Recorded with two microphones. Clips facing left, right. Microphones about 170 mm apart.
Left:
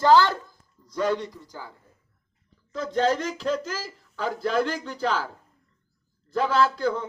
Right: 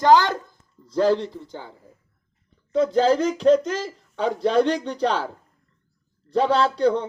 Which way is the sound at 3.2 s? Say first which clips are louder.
Right 10 dB; centre (ahead or behind).